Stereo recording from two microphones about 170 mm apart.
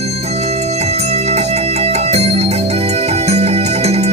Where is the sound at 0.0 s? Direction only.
40° right (ahead or behind).